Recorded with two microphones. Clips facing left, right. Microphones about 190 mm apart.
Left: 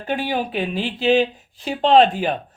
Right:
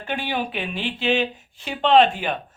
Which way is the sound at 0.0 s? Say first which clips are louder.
Left 3 dB; 40° left (ahead or behind).